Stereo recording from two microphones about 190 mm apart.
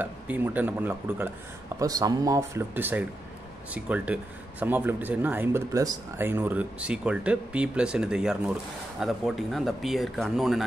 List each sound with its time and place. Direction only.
0.0 s speech: 10° right (ahead or behind)